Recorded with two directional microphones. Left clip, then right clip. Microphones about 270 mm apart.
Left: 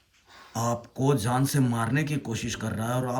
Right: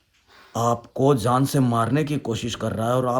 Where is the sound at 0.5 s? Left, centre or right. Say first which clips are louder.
Right 7 dB; centre.